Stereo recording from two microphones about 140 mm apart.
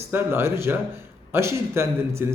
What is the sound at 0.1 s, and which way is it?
Speech, 15° right (ahead or behind).